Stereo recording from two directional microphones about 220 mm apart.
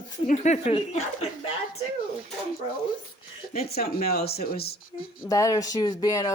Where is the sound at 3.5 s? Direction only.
45° left (ahead or behind).